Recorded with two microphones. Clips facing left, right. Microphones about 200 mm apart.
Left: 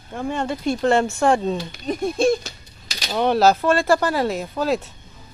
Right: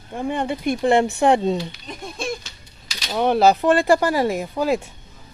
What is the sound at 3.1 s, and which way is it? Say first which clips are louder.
Speech: even; 10° right (ahead or behind).